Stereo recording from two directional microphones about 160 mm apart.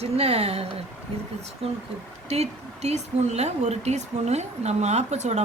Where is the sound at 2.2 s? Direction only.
40° right (ahead or behind).